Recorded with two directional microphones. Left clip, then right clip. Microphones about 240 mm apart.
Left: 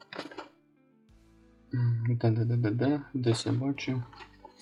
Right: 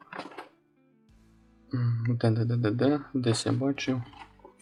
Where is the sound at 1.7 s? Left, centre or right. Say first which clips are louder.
Right 2 dB; right.